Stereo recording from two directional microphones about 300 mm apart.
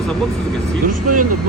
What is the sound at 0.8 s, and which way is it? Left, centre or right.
Speech, right.